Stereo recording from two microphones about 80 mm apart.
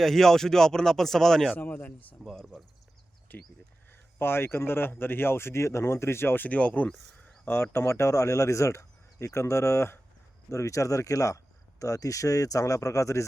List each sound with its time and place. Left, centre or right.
0.0 s speech: centre
1.5 s speech: centre
2.4 s speech: centre
3.3 s speech: left
7.4 s speech: left